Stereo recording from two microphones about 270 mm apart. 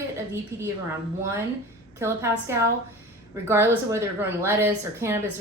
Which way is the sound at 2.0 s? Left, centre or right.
Centre.